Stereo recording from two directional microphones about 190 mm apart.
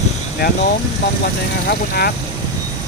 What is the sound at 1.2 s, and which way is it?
Speech, 55° left (ahead or behind).